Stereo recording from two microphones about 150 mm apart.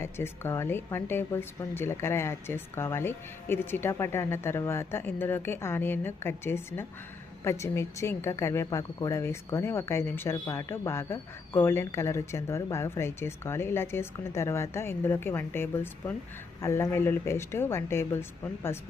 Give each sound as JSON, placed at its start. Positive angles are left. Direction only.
{"t": 0.0, "sound": "speech", "side_deg": 15}